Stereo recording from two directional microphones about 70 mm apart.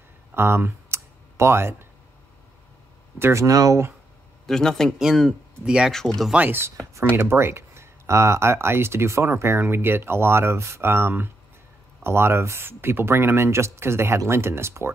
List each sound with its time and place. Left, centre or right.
0.3 s a sound: right
3.2 s speech: right
3.4 s speech: right
4.5 s speech: centre
4.9 s speech: centre
6.3 s speech: right
7.2 s speech: right